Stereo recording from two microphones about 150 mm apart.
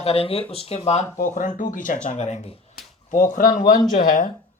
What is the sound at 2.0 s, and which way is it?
Speech, 50° left (ahead or behind).